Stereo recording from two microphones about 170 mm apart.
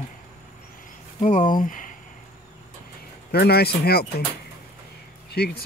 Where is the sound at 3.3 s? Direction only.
70° left (ahead or behind).